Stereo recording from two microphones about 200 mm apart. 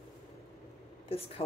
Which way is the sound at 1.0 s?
30° left (ahead or behind).